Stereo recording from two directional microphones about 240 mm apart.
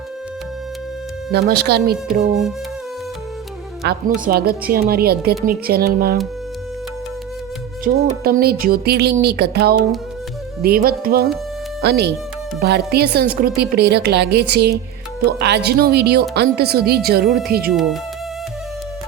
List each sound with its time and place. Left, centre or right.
1.3 s a woman's voice: right
3.8 s a woman's voice: right
7.9 s a woman's voice: right
17.2 s speech: centre
17.5 s a woman's voice: right
17.7 s speech: centre